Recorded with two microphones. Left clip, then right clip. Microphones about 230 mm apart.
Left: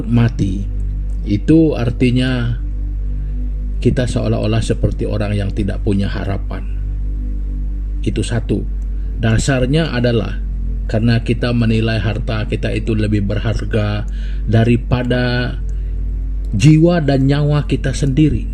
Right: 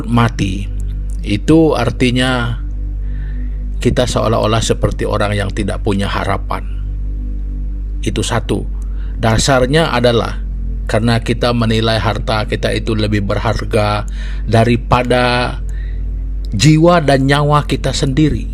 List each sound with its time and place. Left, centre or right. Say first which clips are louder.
0.2 s a man's voice: right 5 dB; right
3.8 s a man's voice: right 4 dB; right
8.0 s a man's voice: right 4 dB; right
16.6 s a man's voice: right 3 dB; right